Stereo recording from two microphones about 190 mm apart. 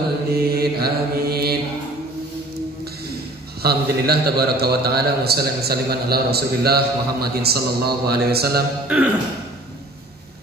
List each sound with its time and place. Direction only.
0.3 s mantra: 55° right (ahead or behind)
3.6 s a man's voice: 55° right (ahead or behind)
8.8 s speech: 5° right (ahead or behind)